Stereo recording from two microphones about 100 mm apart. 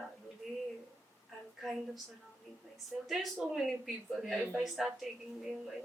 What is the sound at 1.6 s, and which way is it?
Speech, centre (ahead or behind).